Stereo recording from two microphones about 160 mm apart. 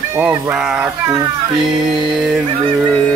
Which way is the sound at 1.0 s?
25° right (ahead or behind).